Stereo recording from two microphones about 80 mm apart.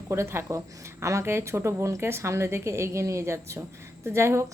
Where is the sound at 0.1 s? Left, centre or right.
Right.